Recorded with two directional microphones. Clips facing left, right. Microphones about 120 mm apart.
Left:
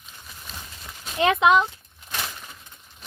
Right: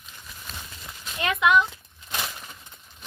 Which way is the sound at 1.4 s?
20° left (ahead or behind).